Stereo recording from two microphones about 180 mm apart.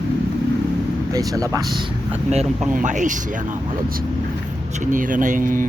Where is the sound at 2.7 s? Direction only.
45° right (ahead or behind).